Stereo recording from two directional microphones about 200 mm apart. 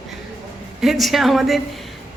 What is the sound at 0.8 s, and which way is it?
A woman's voice, centre (ahead or behind).